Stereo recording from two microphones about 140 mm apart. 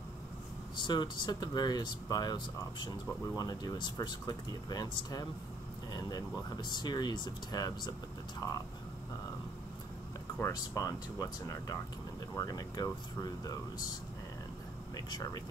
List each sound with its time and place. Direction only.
0.7 s speech: 30° left (ahead or behind)
10.4 s speech: 25° left (ahead or behind)
15.0 s speech: 30° left (ahead or behind)